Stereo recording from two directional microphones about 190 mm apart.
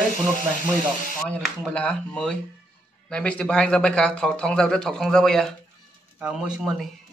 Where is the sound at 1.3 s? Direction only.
5° left (ahead or behind).